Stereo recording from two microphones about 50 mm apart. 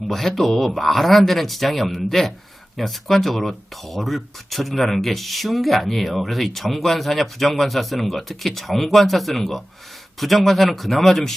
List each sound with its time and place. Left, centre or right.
0.1 s speech: centre